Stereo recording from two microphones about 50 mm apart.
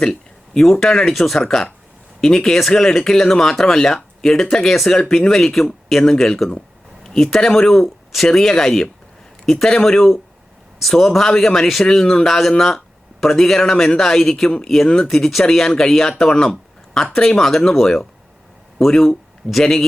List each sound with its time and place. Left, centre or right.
0.0 s speech: centre
15.1 s speech: centre